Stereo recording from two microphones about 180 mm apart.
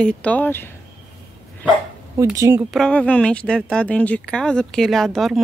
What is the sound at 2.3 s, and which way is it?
Speech, 20° right (ahead or behind).